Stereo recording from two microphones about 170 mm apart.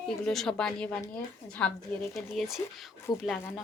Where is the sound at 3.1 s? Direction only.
25° left (ahead or behind).